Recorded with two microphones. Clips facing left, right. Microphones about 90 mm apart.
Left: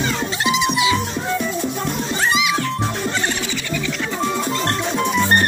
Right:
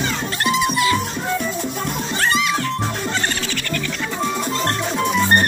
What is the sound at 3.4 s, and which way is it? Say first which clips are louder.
Music: left 1 dB; 15° left (ahead or behind).